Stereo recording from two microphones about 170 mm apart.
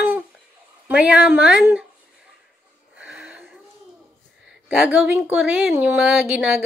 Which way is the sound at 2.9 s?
5° right (ahead or behind).